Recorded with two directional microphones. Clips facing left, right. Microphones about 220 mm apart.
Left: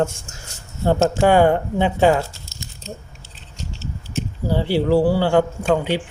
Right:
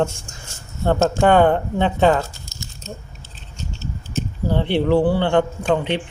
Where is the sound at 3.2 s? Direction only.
85° left.